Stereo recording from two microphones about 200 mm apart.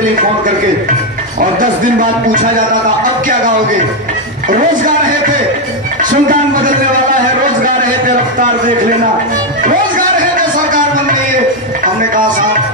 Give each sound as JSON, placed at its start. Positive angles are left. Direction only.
{"t": 1.4, "sound": "music", "side_deg": -40}
{"t": 4.5, "sound": "music", "side_deg": -40}
{"t": 6.0, "sound": "a man's voice", "side_deg": -40}
{"t": 8.4, "sound": "music", "side_deg": -40}
{"t": 11.8, "sound": "music", "side_deg": -40}